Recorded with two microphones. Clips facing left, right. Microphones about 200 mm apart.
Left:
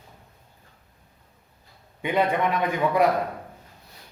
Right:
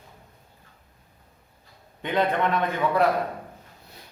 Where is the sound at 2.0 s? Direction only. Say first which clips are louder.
Left 1 dB; 10° left (ahead or behind).